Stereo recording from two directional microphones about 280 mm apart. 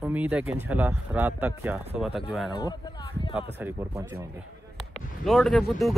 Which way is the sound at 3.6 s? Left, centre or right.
Centre.